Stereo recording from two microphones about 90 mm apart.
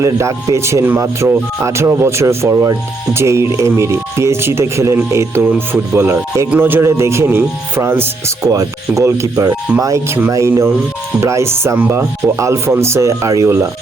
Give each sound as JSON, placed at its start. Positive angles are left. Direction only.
{"t": 0.0, "sound": "speech", "side_deg": -35}
{"t": 8.4, "sound": "speech", "side_deg": -40}